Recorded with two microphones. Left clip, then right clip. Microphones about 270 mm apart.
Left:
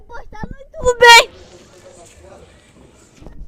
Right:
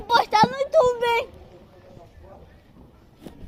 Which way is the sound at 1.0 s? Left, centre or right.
Left.